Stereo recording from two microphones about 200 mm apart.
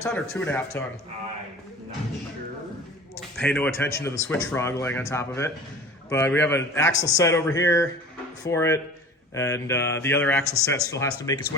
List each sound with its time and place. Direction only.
0.0 s speech: 10° left (ahead or behind)
3.2 s speech: 5° left (ahead or behind)